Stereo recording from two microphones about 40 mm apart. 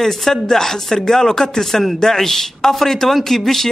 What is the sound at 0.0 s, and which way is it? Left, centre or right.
Speech, centre.